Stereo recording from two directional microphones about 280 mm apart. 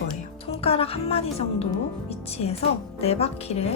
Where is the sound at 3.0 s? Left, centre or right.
Left.